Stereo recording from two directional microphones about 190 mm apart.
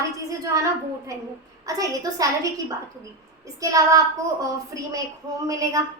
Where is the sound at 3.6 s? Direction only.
20° right (ahead or behind).